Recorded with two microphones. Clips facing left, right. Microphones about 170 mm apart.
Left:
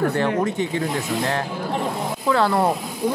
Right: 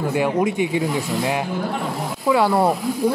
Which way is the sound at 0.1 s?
10° right (ahead or behind).